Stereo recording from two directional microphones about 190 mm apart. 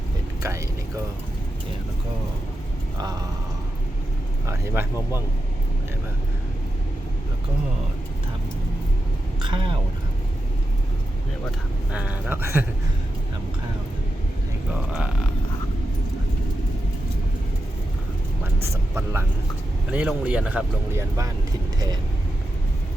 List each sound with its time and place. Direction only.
4.4 s a man's voice: 15° right (ahead or behind)
9.4 s speech: 25° right (ahead or behind)
11.9 s a man's voice: 5° right (ahead or behind)
14.7 s speech: 5° right (ahead or behind)
18.6 s a man's voice: 15° right (ahead or behind)